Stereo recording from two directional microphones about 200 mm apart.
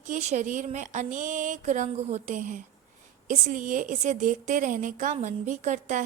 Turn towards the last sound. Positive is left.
turn(degrees=-40)  # may be behind; listen again after turning